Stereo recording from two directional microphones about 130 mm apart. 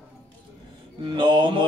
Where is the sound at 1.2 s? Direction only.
35° right (ahead or behind).